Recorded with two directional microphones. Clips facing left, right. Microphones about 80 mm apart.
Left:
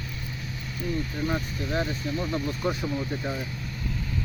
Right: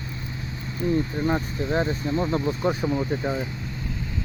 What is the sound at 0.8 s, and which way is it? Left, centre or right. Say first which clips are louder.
Speech: right 6 dB; right.